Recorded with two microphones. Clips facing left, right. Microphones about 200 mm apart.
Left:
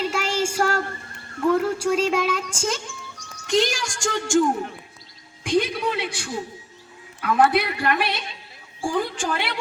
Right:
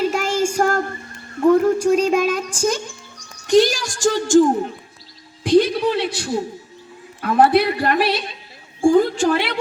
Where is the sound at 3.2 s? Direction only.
35° right (ahead or behind).